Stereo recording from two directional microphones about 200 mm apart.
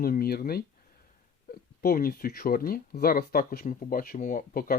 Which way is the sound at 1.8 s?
50° left (ahead or behind).